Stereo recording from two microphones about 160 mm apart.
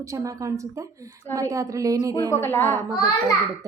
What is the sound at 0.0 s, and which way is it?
Speech, 20° right (ahead or behind).